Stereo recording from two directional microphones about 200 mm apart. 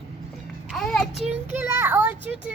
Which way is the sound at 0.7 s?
Centre (ahead or behind).